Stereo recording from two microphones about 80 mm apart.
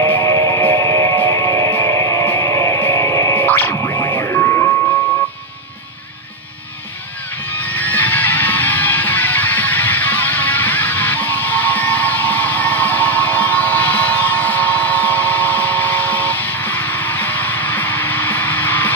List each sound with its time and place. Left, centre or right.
0.0 s music: left
3.3 s music: left
7.5 s music: left